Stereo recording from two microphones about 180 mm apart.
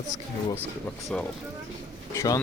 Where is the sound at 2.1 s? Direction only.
20° left (ahead or behind).